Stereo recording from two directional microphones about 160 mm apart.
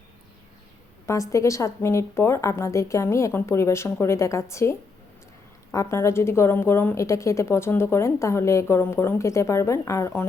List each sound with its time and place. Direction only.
1.0 s a woman's voice: 20° left (ahead or behind)